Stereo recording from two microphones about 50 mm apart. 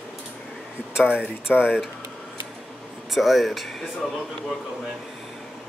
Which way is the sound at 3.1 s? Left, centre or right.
Centre.